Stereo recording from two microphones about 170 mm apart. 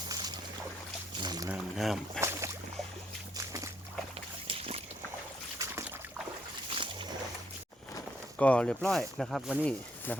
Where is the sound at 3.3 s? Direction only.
20° right (ahead or behind).